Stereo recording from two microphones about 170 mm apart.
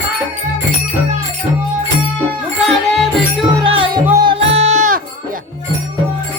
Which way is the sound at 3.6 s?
30° right (ahead or behind).